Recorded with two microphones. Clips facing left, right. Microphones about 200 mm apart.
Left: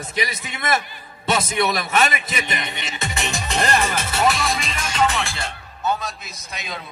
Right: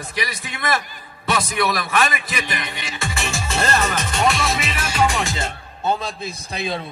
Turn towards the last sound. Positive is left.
turn(degrees=-30)  # may be behind; listen again after turning